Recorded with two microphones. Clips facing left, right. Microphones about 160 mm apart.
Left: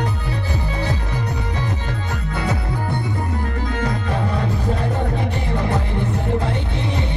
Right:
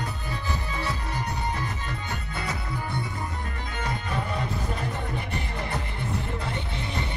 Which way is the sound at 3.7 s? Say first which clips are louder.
Left 5 dB; 90° left.